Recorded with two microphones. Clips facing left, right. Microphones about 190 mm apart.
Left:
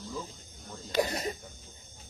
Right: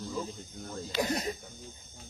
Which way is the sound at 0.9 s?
45° left (ahead or behind).